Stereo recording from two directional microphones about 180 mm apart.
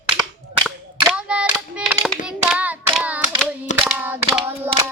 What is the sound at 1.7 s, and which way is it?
Hands, 5° right (ahead or behind).